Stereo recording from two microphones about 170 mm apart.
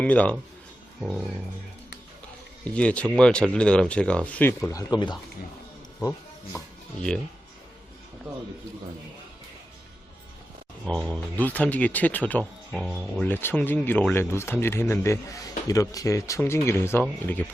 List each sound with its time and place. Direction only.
0.0 s speech: 10° left (ahead or behind)
2.7 s speech: 5° left (ahead or behind); by 5.2 s 25° left (ahead or behind)
6.0 s music: 15° left (ahead or behind)
10.8 s speech: 5° left (ahead or behind)